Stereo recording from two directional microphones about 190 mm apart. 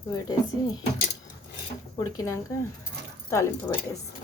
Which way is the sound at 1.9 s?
20° left (ahead or behind).